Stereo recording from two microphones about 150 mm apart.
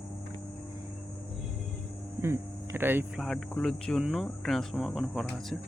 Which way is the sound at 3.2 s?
Centre (ahead or behind).